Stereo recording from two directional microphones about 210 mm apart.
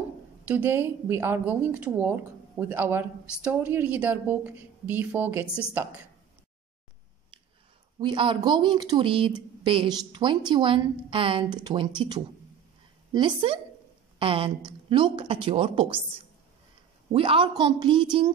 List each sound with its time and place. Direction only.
0.5 s a woman's voice: 10° right (ahead or behind)
8.0 s speech: 20° right (ahead or behind)
17.1 s speech: 25° right (ahead or behind)